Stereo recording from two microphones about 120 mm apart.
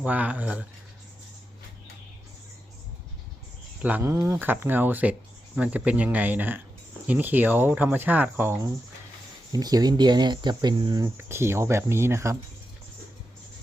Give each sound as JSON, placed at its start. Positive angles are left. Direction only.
{"t": 0.0, "sound": "speech", "side_deg": -10}
{"t": 3.8, "sound": "speech", "side_deg": -15}
{"t": 11.2, "sound": "speech", "side_deg": -20}